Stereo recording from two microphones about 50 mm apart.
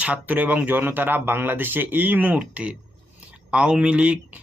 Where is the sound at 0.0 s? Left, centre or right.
Right.